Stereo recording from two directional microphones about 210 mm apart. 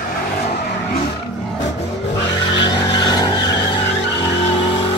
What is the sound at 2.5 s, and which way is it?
Vehicle, 20° left (ahead or behind).